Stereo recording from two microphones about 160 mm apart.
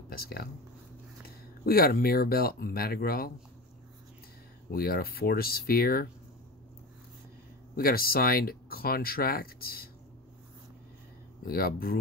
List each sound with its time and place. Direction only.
0.1 s speech: 70° left (ahead or behind)
1.7 s speech: 70° left (ahead or behind)
4.6 s speech: 70° left (ahead or behind)
7.7 s speech: 70° left (ahead or behind)
11.4 s speech: 70° left (ahead or behind)